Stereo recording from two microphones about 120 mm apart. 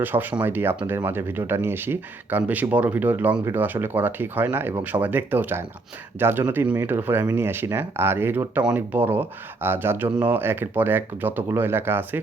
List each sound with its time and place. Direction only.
0.0 s speech: 15° right (ahead or behind)